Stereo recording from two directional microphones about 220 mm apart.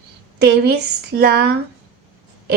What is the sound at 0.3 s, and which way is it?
Speech, 50° right (ahead or behind).